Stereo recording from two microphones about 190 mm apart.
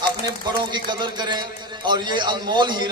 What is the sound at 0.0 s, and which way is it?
A man's voice, 25° right (ahead or behind).